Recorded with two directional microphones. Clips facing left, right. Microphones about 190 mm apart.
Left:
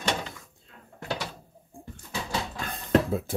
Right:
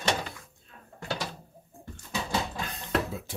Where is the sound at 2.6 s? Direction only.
55° left (ahead or behind).